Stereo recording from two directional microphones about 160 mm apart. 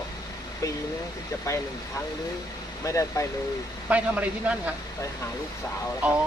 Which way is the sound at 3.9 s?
10° right (ahead or behind).